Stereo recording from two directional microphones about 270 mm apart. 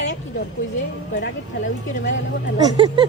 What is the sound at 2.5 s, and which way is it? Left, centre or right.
Speech, centre.